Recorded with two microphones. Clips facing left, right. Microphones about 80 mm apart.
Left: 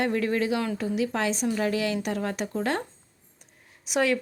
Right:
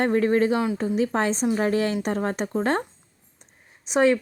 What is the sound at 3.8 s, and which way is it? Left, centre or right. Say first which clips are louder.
Speech: right 5 dB; right.